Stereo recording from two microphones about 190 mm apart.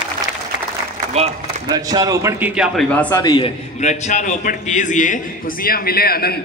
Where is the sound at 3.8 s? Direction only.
40° left (ahead or behind); by 6.4 s 55° left (ahead or behind).